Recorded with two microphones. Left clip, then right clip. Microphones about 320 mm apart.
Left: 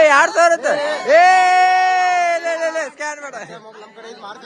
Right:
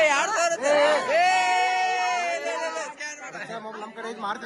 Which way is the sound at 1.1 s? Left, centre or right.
Left.